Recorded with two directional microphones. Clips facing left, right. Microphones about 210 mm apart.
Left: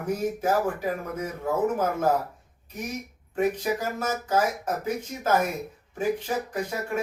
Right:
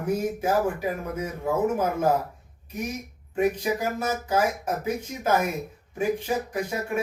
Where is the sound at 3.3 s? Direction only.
10° right (ahead or behind).